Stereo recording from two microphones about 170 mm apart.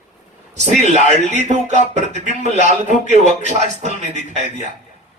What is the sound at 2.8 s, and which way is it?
A man's voice, 45° right (ahead or behind).